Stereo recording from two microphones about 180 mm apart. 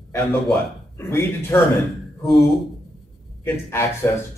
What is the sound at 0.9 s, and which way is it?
Speech, 15° left (ahead or behind).